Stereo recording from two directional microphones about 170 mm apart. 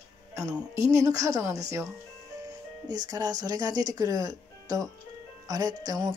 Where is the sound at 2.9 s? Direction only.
25° right (ahead or behind).